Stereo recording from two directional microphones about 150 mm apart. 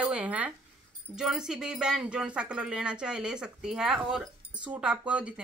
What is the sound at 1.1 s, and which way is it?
Speech, 5° right (ahead or behind).